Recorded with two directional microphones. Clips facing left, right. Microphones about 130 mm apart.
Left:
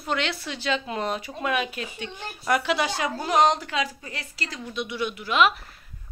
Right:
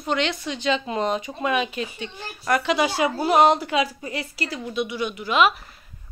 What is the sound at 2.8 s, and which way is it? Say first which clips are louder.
A woman's voice: right 5 dB; 10° right (ahead or behind).